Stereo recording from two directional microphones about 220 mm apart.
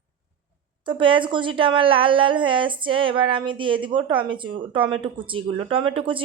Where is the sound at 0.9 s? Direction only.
25° right (ahead or behind).